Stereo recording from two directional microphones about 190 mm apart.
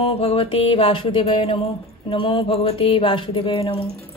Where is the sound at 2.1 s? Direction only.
30° left (ahead or behind).